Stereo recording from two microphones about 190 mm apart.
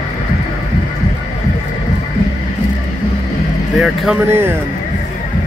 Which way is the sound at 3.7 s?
Centre (ahead or behind).